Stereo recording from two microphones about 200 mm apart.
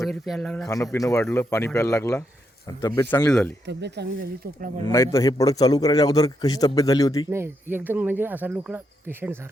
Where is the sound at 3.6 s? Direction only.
60° right (ahead or behind).